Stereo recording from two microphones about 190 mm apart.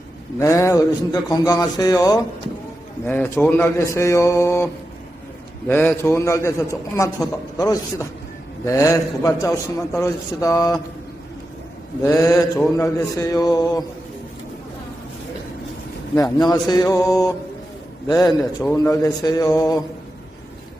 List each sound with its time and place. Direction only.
0.3 s a man's voice: 15° left (ahead or behind)
12.0 s a man's voice: 15° left (ahead or behind)
16.5 s a man's voice: 20° left (ahead or behind)